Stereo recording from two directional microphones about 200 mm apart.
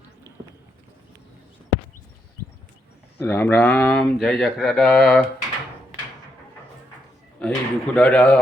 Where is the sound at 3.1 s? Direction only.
10° left (ahead or behind).